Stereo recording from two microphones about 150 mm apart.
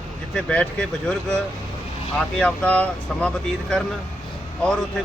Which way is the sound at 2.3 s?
5° left (ahead or behind).